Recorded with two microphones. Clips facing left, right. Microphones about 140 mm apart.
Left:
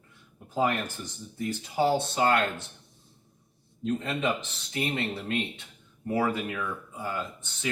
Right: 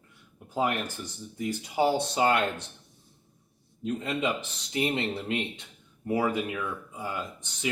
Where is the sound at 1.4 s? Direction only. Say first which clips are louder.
Even; 15° right (ahead or behind).